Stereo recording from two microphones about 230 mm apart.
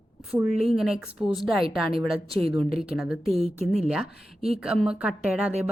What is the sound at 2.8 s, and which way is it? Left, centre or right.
Speech, centre.